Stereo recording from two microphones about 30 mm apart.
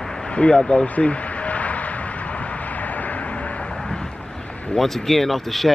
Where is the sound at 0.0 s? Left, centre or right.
Centre.